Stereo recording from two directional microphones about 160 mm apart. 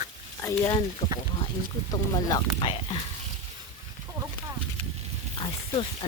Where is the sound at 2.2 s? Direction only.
25° left (ahead or behind).